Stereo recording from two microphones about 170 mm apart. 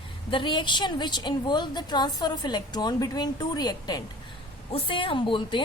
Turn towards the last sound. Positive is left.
turn(degrees=30)  # may be behind; listen again after turning